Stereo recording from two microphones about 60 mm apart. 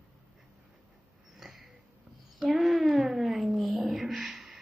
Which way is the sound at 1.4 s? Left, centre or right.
Centre.